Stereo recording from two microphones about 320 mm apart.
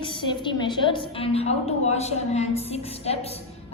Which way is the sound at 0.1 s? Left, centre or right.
Centre.